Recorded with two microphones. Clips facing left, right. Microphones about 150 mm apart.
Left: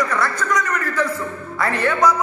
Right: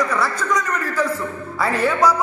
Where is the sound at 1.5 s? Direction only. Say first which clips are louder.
Right 1 dB; 5° right (ahead or behind).